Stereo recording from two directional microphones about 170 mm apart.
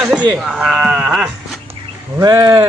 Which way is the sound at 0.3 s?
5° right (ahead or behind).